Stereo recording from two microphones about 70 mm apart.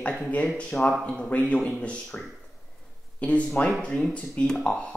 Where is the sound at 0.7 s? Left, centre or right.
Centre.